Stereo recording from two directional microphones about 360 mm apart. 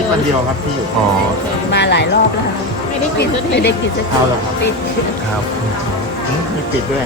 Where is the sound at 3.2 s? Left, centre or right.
Left.